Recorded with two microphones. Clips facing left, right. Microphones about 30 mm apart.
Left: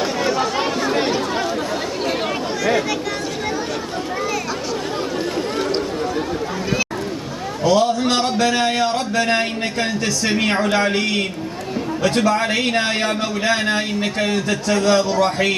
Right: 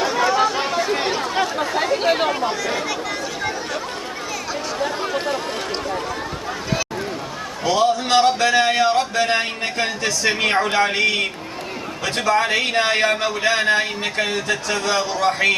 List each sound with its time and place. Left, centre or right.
0.0 s chatter: centre
1.7 s chatter: centre
7.6 s a man's voice: centre